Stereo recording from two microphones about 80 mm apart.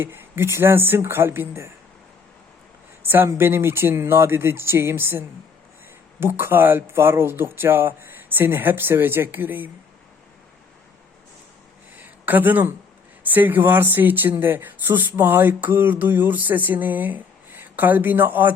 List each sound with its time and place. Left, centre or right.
0.0 s speech: right
3.0 s speech: right
12.0 s speech: right